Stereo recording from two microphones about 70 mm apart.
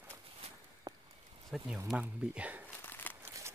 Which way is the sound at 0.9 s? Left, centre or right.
Right.